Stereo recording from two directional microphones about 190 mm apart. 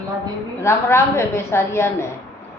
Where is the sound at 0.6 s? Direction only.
15° left (ahead or behind).